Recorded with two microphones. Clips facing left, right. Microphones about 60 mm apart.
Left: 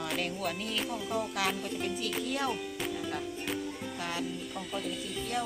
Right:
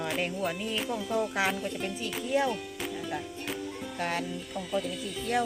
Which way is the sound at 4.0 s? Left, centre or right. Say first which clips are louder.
Right 5 dB; right.